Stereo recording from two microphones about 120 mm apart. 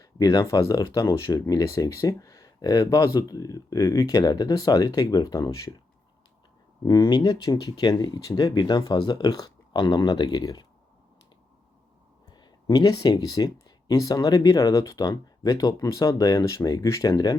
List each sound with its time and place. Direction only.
0.0 s speech: 30° left (ahead or behind)
6.8 s speech: 35° left (ahead or behind)
12.4 s speech: 35° left (ahead or behind)